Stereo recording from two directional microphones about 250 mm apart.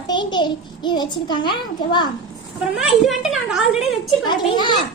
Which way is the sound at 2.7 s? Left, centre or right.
Centre.